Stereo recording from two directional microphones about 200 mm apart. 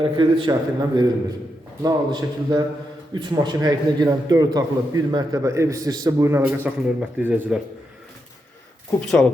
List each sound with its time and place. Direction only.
0.0 s a man's voice: 25° right (ahead or behind); by 7.6 s 5° right (ahead or behind)
9.0 s speech: 5° left (ahead or behind)